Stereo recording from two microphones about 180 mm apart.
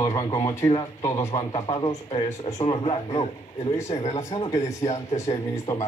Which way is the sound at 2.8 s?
35° left (ahead or behind).